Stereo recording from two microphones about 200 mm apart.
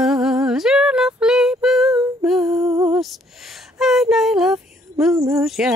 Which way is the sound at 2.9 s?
Centre (ahead or behind).